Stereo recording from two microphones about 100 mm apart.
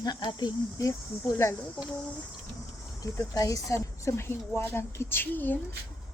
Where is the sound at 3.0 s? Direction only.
35° left (ahead or behind); by 5.6 s 20° left (ahead or behind).